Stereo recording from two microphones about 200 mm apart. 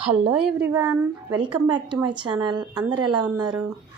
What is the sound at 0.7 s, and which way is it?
A woman's voice, 15° right (ahead or behind).